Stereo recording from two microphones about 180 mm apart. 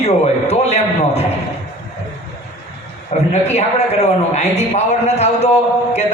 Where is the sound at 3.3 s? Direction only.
35° left (ahead or behind).